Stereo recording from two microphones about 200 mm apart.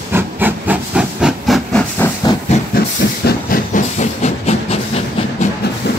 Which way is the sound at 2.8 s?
50° left (ahead or behind).